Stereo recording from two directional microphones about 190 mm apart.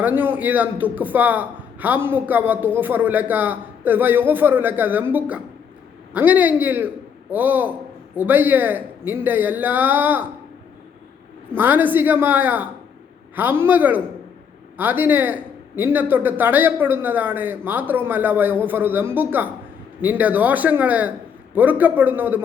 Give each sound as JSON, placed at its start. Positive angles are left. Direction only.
{"t": 0.0, "sound": "a man's voice", "side_deg": -10}
{"t": 11.5, "sound": "a man's voice", "side_deg": -10}